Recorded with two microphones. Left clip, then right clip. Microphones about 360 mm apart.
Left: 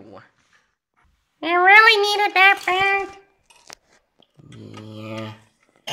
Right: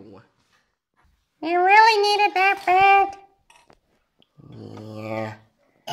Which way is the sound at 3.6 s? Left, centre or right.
Left.